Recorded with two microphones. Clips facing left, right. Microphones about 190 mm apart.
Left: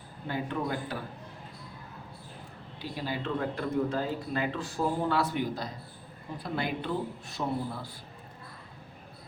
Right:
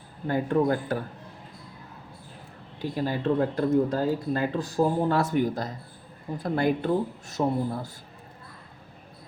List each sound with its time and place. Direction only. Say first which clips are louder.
0.3 s speech: right 9 dB; 45° right (ahead or behind)
2.8 s speech: right 8 dB; 45° right (ahead or behind)